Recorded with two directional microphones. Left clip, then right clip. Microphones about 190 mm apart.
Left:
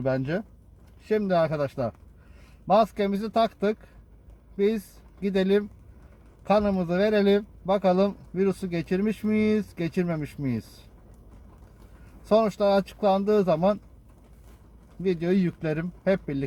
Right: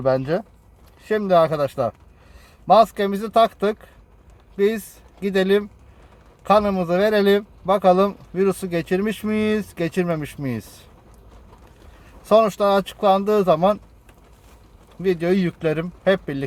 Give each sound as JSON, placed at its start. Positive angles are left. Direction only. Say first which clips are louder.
{"t": 0.0, "sound": "speech", "louder": "right 7 dB", "side_deg": -50}
{"t": 12.2, "sound": "speech", "louder": "right 6 dB", "side_deg": -50}
{"t": 15.0, "sound": "speech", "louder": "right 6 dB", "side_deg": -45}